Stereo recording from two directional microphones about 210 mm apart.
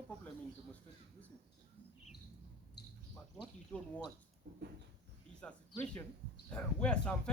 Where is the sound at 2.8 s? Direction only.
50° left (ahead or behind).